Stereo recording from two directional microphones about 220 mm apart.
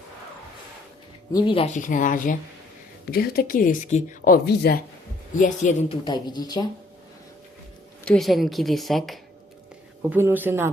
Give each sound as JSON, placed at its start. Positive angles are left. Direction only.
{"t": 1.3, "sound": "speech", "side_deg": 20}
{"t": 5.3, "sound": "speech", "side_deg": 35}
{"t": 6.1, "sound": "speech", "side_deg": 20}
{"t": 8.0, "sound": "a woman's voice", "side_deg": 0}
{"t": 10.0, "sound": "speech", "side_deg": -10}